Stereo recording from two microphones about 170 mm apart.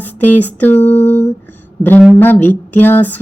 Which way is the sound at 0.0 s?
10° left (ahead or behind).